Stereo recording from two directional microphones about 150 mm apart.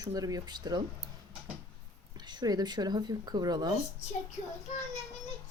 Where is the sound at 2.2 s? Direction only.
30° right (ahead or behind).